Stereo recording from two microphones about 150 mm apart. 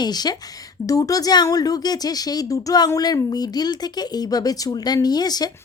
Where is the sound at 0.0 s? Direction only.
25° left (ahead or behind).